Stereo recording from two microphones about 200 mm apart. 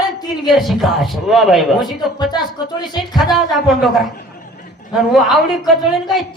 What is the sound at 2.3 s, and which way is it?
Speech, 20° left (ahead or behind).